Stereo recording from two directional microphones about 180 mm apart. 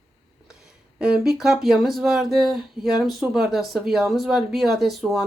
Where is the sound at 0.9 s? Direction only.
5° right (ahead or behind).